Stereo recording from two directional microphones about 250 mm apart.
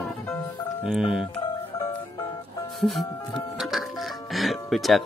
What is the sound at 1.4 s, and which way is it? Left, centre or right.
Music, centre.